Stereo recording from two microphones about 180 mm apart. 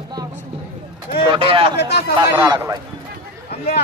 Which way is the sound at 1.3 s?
30° right (ahead or behind).